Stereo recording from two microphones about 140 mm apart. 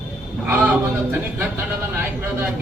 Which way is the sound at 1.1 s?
15° right (ahead or behind).